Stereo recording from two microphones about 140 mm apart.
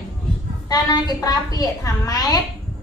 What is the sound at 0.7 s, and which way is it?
A woman's voice, 25° left (ahead or behind).